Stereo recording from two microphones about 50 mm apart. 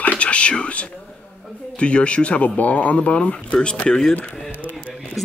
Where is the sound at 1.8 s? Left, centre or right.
Left.